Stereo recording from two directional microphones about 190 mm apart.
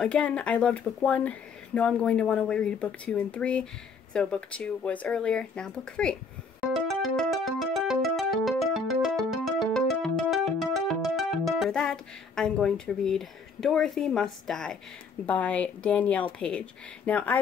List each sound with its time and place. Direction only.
0.0 s speech: 5° left (ahead or behind)
6.6 s music: centre (ahead or behind)
10.6 s speech: centre (ahead or behind)